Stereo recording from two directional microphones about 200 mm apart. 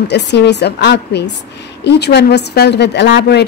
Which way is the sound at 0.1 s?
55° left (ahead or behind).